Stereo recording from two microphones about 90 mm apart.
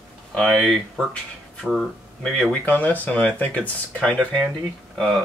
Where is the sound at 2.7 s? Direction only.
15° left (ahead or behind).